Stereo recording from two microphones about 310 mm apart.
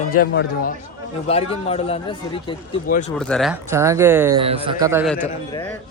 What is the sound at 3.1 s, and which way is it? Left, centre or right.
Speech, centre.